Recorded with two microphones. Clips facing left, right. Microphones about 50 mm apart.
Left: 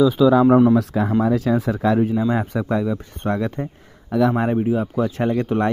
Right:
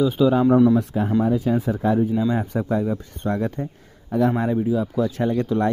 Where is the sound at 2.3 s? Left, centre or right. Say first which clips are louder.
Left 1 dB; left.